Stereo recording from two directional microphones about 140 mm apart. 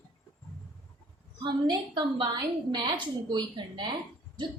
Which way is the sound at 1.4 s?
30° right (ahead or behind).